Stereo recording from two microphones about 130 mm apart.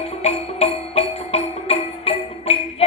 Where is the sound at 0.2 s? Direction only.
50° left (ahead or behind).